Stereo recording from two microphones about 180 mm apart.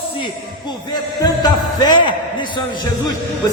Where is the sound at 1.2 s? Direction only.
20° left (ahead or behind).